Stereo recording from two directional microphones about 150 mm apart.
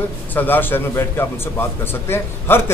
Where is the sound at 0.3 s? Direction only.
10° left (ahead or behind).